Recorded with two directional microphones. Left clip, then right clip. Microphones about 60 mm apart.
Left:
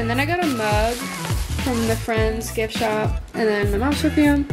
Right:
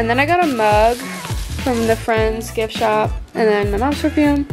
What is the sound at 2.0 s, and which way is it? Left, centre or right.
Speech, right.